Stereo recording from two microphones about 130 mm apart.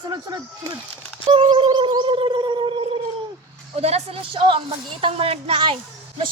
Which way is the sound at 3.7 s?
55° right (ahead or behind).